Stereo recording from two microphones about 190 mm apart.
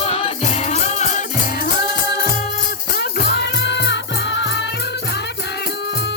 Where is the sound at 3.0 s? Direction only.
60° left (ahead or behind).